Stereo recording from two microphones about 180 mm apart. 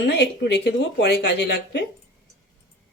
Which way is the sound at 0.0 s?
70° left (ahead or behind).